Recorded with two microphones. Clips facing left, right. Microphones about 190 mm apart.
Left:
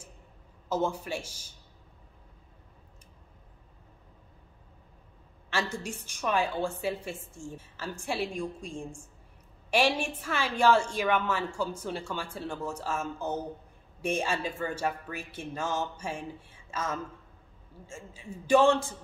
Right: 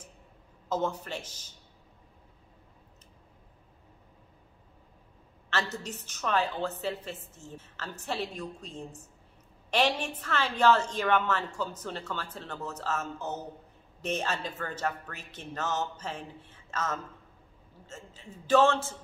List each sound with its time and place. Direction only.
0.7 s a woman's voice: 10° left (ahead or behind)
5.5 s a woman's voice: 10° left (ahead or behind)